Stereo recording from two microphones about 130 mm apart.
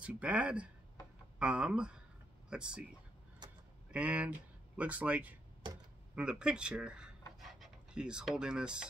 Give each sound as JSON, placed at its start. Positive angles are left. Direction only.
{"t": 0.0, "sound": "speech", "side_deg": -10}
{"t": 3.4, "sound": "a sound", "side_deg": -35}
{"t": 3.9, "sound": "speech", "side_deg": -10}